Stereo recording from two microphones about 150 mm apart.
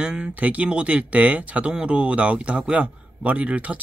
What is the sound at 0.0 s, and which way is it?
Speech, 5° right (ahead or behind).